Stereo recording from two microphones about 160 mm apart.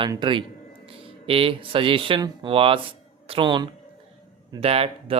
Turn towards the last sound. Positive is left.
turn(degrees=-40)  # may be behind; listen again after turning